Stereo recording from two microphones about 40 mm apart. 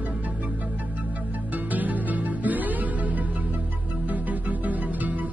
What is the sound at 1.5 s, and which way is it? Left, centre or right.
Music, right.